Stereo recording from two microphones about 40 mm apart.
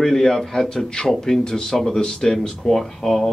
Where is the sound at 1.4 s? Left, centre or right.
Centre.